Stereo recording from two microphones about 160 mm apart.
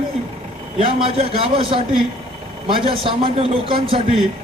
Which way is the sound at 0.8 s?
35° right (ahead or behind).